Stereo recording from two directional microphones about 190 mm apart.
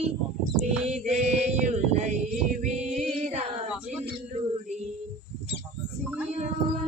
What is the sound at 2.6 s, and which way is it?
Female singing, 35° right (ahead or behind).